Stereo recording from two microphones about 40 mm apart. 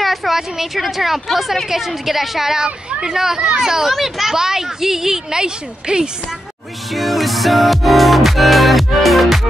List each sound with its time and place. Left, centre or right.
0.0 s a woman's voice: centre
6.9 s music: centre